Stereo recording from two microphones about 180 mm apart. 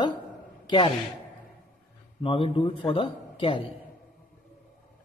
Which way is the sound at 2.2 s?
30° left (ahead or behind).